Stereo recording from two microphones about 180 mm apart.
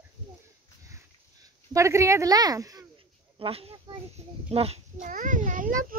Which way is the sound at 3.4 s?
30° right (ahead or behind).